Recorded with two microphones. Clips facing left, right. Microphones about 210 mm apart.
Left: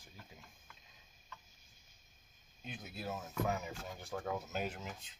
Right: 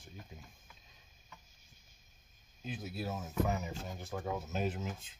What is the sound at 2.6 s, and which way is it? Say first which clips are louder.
Speech: right 5 dB; centre (ahead or behind).